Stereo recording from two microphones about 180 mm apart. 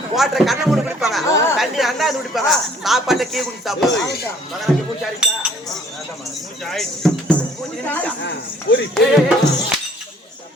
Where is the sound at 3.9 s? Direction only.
70° left (ahead or behind).